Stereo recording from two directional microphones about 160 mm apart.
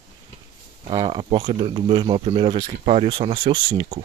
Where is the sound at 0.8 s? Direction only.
30° right (ahead or behind).